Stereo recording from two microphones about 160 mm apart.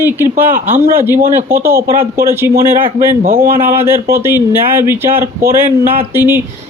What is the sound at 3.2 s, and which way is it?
Speech, 65° right (ahead or behind).